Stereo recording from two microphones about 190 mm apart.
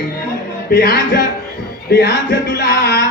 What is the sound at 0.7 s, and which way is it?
Speech, 60° left (ahead or behind).